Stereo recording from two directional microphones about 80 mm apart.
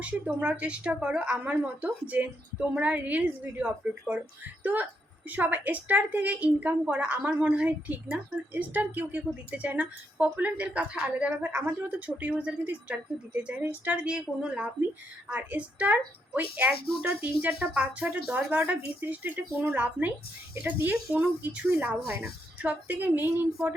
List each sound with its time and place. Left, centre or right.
0.0 s a woman's voice: centre